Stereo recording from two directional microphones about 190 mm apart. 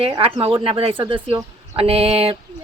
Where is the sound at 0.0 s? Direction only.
30° right (ahead or behind).